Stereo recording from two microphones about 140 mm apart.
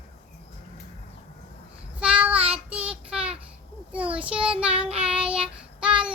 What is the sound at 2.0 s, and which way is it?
Child singing, 10° right (ahead or behind).